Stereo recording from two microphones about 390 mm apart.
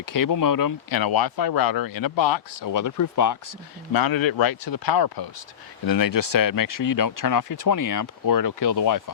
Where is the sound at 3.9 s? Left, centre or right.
Left.